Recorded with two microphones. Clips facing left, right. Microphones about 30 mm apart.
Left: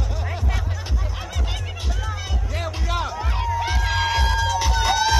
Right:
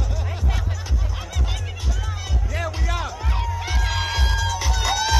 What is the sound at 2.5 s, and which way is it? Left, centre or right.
Music, left.